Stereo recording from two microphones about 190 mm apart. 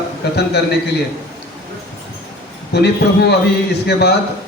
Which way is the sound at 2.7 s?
60° left (ahead or behind).